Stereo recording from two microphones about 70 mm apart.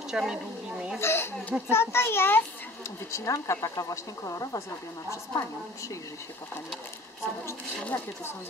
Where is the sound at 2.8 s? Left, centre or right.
Left.